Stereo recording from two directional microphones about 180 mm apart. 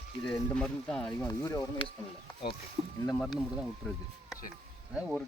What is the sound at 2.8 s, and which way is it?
Speech, 35° right (ahead or behind).